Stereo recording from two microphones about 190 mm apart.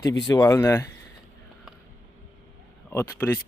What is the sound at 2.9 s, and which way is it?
Speech, 10° left (ahead or behind).